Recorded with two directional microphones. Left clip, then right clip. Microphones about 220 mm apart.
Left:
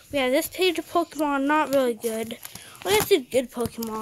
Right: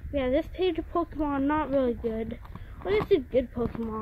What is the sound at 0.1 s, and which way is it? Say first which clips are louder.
Speech: left 4 dB; 10° left (ahead or behind).